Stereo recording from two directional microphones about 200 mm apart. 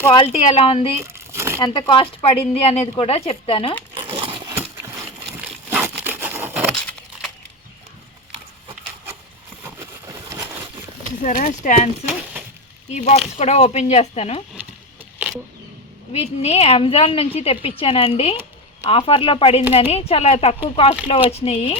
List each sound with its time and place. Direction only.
0.0 s a woman's voice: 25° left (ahead or behind)
1.0 s crumpling: 15° right (ahead or behind)
1.6 s a woman's voice: 20° left (ahead or behind)
4.1 s wood: 25° right (ahead or behind)
5.3 s wood: 10° right (ahead or behind)
9.6 s a sound: 15° right (ahead or behind)
11.2 s speech: 45° left (ahead or behind)
12.0 s a sound: 10° right (ahead or behind)
12.9 s speech: 35° left (ahead or behind)
16.4 s a woman's voice: 30° left (ahead or behind)